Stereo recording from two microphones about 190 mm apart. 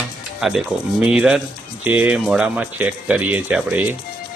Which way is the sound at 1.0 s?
5° right (ahead or behind).